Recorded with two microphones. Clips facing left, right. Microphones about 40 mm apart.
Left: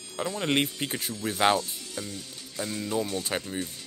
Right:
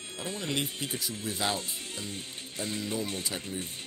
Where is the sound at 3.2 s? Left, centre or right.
Left.